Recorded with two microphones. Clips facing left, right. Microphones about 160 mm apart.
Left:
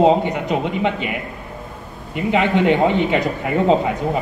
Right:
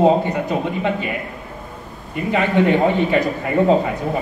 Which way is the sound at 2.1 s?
20° left (ahead or behind).